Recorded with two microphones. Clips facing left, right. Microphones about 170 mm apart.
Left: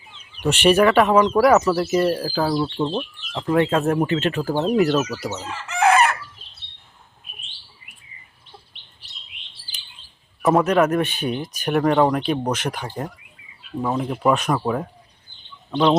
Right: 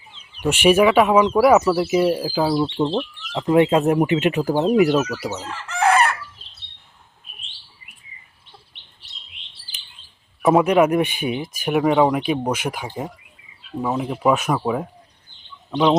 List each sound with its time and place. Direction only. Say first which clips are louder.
0.4 s speech: right 1 dB; 10° right (ahead or behind)
5.4 s chicken: left 2 dB; 5° left (ahead or behind)
10.4 s speech: right 2 dB; 10° right (ahead or behind)